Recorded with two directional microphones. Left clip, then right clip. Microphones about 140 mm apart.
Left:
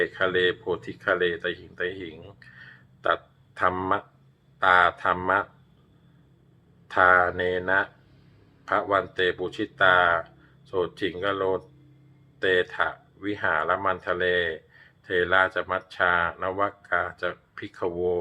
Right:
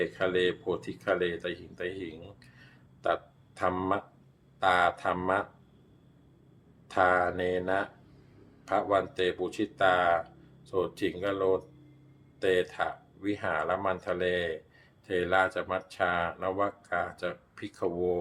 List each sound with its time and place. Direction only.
0.0 s speech: 25° right (ahead or behind)
6.9 s speech: 20° right (ahead or behind)